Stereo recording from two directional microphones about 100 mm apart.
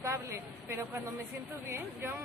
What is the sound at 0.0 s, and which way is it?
A woman's voice, 30° right (ahead or behind).